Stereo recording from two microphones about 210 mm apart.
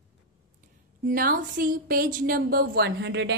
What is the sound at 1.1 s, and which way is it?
A woman's voice, 40° right (ahead or behind).